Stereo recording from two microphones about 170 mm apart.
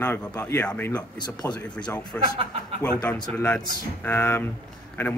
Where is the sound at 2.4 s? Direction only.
35° right (ahead or behind).